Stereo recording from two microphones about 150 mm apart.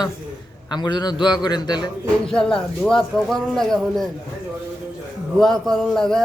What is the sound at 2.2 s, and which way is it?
Speech, 5° left (ahead or behind).